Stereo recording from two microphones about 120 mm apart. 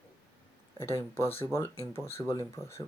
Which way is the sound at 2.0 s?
20° left (ahead or behind).